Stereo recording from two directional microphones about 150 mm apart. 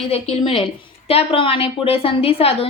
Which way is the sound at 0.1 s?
40° left (ahead or behind).